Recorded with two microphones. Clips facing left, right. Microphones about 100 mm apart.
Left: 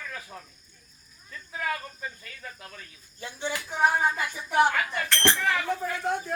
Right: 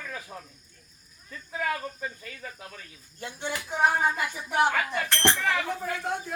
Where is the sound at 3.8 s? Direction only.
5° right (ahead or behind).